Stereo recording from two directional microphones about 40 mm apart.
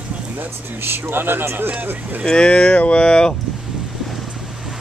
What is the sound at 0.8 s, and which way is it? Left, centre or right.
Speech, right.